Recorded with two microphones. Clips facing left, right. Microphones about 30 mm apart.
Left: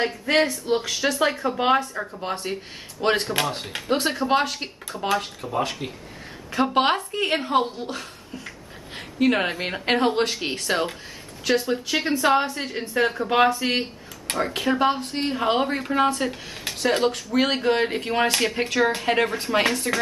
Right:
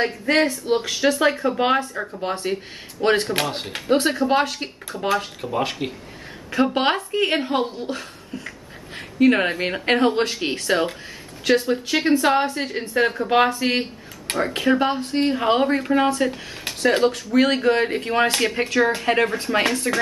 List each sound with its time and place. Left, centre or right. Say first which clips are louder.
0.0 s speech: right 2 dB; centre
5.4 s speech: right 2 dB; centre
6.5 s speech: right 1 dB; centre